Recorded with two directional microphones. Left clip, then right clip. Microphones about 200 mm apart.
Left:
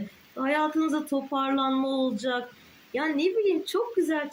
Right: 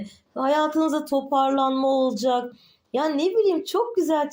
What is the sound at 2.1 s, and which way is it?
Speech, 15° left (ahead or behind).